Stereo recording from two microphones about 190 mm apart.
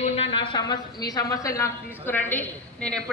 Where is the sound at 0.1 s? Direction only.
30° left (ahead or behind).